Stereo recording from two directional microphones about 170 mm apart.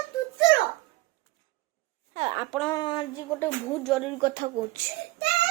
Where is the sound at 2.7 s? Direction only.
25° left (ahead or behind).